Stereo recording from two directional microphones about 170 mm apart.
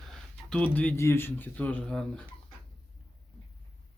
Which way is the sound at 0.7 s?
10° left (ahead or behind).